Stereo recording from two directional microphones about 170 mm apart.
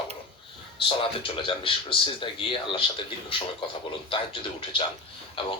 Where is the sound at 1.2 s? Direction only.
30° left (ahead or behind).